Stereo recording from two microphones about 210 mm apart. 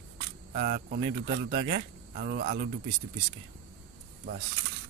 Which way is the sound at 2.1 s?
45° right (ahead or behind).